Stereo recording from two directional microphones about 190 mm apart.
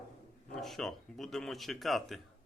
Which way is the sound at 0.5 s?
Centre (ahead or behind).